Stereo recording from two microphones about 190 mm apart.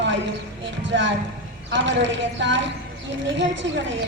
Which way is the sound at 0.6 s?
70° right (ahead or behind).